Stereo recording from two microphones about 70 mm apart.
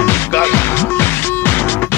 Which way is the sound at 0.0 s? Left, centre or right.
Left.